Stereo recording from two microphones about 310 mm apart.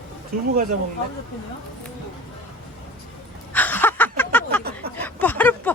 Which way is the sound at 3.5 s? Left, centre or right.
Centre.